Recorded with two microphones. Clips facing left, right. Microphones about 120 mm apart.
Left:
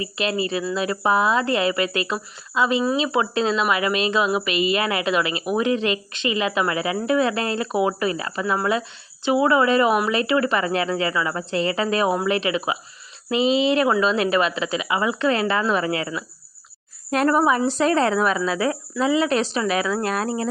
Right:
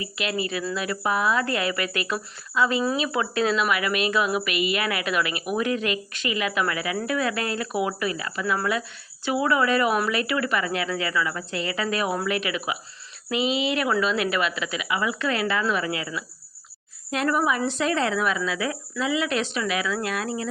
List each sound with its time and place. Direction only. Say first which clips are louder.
0.0 s speech: left 4 dB; 30° left (ahead or behind)